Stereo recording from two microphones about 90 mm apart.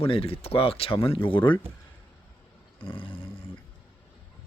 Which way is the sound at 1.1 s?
75° left (ahead or behind).